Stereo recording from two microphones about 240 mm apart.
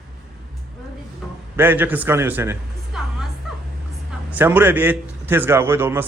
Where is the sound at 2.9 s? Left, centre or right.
Centre.